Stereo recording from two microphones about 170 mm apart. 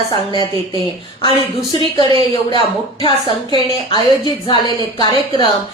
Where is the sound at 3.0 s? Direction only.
25° left (ahead or behind).